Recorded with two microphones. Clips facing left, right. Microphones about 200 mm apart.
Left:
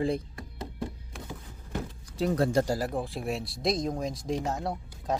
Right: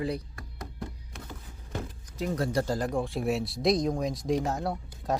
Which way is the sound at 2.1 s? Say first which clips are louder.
Left 3 dB; 30° left (ahead or behind).